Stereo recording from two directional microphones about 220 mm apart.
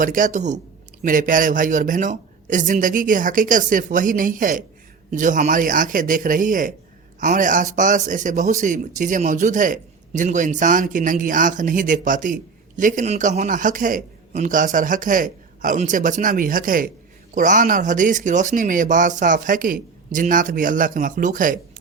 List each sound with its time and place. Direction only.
0.0 s a man's voice: 35° right (ahead or behind)